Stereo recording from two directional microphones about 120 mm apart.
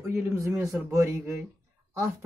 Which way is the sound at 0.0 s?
20° right (ahead or behind).